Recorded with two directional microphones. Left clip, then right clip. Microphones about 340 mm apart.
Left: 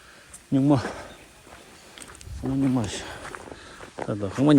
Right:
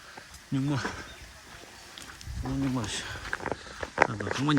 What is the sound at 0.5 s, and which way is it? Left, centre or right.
Speech, centre.